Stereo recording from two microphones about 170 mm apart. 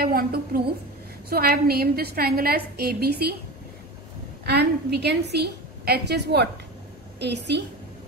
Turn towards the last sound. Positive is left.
turn(degrees=-80)